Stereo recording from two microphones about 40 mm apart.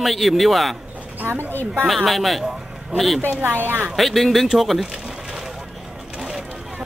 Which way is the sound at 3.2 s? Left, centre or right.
Right.